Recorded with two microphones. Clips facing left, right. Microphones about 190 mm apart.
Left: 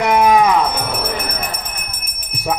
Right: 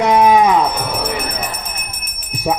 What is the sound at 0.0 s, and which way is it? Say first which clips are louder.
Music: right 1 dB; 20° right (ahead or behind).